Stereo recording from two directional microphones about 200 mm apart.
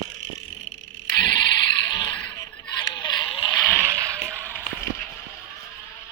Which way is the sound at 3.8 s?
15° right (ahead or behind).